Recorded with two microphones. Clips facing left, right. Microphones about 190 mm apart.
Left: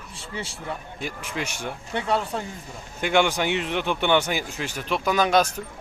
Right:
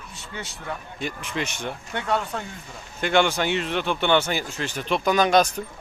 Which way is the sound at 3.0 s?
10° left (ahead or behind).